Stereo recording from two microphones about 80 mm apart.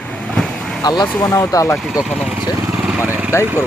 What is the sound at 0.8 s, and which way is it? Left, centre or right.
Speech, left.